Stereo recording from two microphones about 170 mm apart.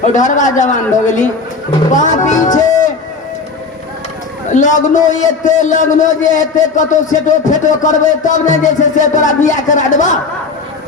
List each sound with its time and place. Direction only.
0.0 s a man's voice: 45° left (ahead or behind)
4.5 s a man's voice: 45° left (ahead or behind)